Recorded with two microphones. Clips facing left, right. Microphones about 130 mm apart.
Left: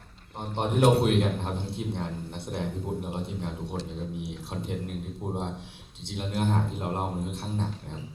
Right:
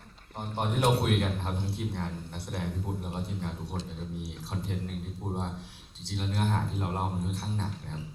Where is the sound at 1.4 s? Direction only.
20° left (ahead or behind).